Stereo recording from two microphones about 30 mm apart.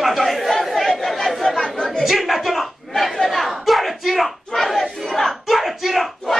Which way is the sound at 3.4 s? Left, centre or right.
Centre.